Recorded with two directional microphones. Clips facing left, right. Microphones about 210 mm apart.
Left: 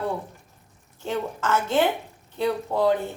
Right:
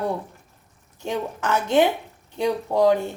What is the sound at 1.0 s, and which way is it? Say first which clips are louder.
Speech: right 1 dB; 15° right (ahead or behind).